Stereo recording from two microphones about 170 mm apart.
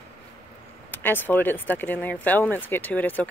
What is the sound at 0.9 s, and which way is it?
Speech, 10° left (ahead or behind).